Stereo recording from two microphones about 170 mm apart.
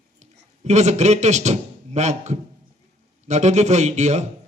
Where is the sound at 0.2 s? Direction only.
40° right (ahead or behind).